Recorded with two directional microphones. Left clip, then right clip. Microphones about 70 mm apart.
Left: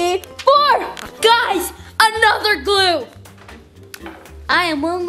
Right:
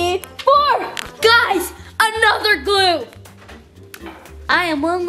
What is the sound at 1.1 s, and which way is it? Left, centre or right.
Music, centre.